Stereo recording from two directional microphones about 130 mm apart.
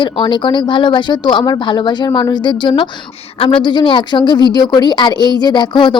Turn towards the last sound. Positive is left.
turn(degrees=35)  # may be behind; listen again after turning